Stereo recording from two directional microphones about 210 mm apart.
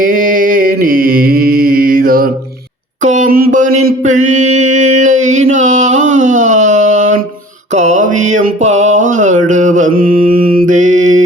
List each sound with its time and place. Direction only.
0.0 s mantra: 40° right (ahead or behind)